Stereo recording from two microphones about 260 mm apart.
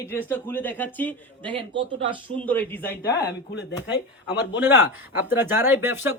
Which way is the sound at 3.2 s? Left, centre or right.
Left.